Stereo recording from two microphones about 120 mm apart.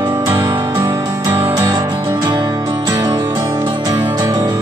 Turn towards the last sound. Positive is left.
turn(degrees=-30)  # may be behind; listen again after turning